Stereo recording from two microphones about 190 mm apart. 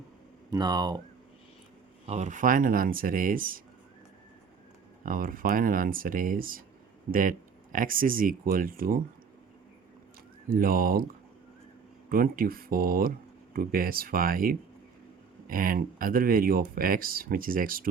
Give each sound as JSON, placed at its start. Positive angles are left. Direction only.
{"t": 0.5, "sound": "speech", "side_deg": -20}
{"t": 2.0, "sound": "speech", "side_deg": -40}
{"t": 5.0, "sound": "speech", "side_deg": -45}
{"t": 10.5, "sound": "speech", "side_deg": -50}
{"t": 12.0, "sound": "speech", "side_deg": -50}